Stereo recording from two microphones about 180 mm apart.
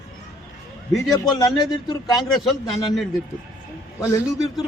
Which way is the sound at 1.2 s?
20° left (ahead or behind).